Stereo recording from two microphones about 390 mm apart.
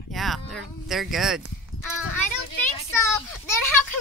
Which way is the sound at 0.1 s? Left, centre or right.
Centre.